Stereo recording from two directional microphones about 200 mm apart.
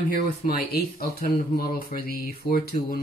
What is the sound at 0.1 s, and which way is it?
Speech, 45° left (ahead or behind).